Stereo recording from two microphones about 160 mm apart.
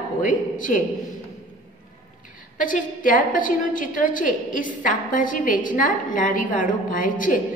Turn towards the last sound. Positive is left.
turn(degrees=55)  # may be behind; listen again after turning